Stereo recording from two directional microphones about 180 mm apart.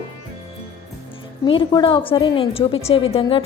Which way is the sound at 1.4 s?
25° left (ahead or behind).